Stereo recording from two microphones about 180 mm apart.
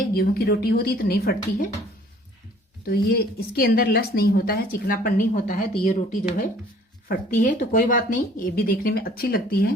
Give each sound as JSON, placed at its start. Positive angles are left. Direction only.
{"t": 0.1, "sound": "speech", "side_deg": 55}
{"t": 2.8, "sound": "speech", "side_deg": 60}
{"t": 7.4, "sound": "speech", "side_deg": 50}